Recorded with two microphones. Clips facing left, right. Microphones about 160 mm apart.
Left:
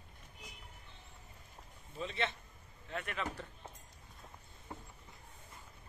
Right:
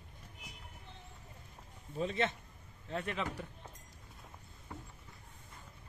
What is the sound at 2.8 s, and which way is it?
Speech, 30° right (ahead or behind).